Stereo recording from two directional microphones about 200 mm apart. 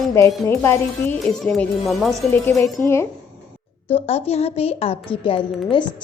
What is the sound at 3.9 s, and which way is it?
A woman's voice, 30° left (ahead or behind).